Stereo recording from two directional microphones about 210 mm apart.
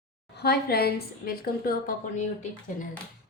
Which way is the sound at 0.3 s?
50° left (ahead or behind).